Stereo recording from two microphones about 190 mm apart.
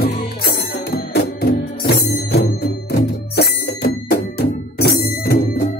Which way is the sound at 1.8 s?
60° left (ahead or behind).